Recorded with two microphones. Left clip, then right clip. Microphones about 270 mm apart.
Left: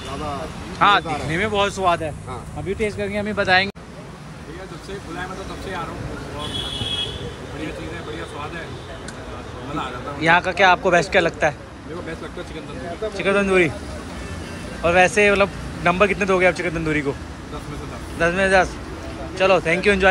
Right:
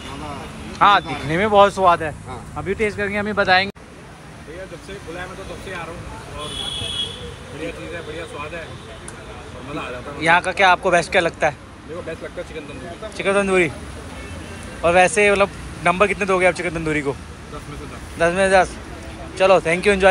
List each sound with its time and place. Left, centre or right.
0.7 s speech: centre
10.2 s speech: centre
13.2 s speech: centre
14.8 s speech: centre
18.2 s speech: centre